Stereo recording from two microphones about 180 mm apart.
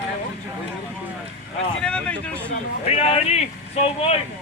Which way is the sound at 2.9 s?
35° left (ahead or behind).